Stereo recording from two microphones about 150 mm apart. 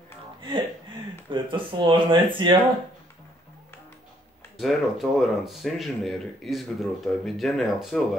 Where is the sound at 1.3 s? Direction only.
35° right (ahead or behind).